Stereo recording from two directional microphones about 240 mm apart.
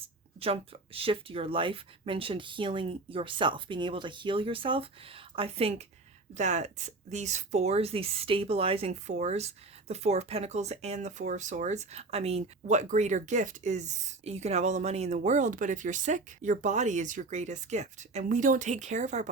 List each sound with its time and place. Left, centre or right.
0.3 s speech: right